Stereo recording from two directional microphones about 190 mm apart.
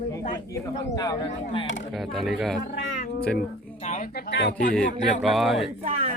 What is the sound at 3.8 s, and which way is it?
Speech, 35° left (ahead or behind).